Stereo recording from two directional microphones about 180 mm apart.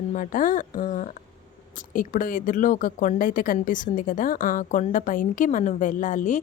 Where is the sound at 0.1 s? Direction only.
45° left (ahead or behind).